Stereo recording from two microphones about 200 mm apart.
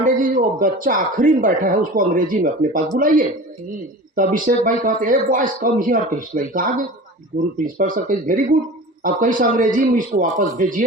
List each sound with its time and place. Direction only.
0.0 s a man's voice: 40° right (ahead or behind)